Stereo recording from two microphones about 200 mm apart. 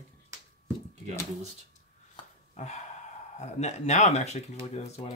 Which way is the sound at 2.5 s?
35° left (ahead or behind).